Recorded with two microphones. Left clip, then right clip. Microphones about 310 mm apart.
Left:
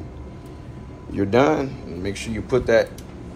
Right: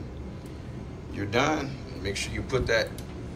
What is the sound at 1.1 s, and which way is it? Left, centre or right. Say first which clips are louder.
Speech: left 8 dB; centre.